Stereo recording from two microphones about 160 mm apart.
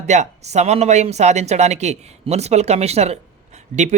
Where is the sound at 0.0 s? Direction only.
45° right (ahead or behind).